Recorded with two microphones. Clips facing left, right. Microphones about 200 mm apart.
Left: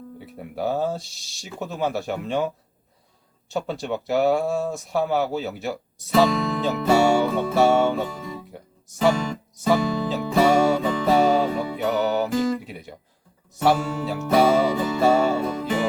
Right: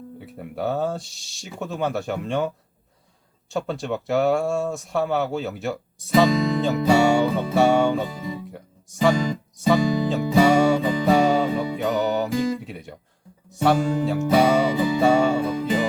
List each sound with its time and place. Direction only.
0.2 s speech: centre (ahead or behind)
3.5 s speech: centre (ahead or behind)
8.4 s music: centre (ahead or behind)
13.5 s speech: centre (ahead or behind)